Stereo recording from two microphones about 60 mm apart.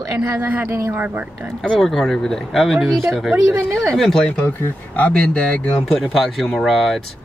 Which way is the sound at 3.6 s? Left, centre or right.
Right.